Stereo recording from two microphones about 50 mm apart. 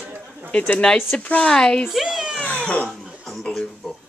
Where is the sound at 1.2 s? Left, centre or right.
Left.